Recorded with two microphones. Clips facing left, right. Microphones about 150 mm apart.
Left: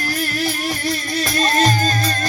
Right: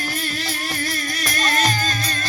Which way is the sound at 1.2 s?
35° left (ahead or behind).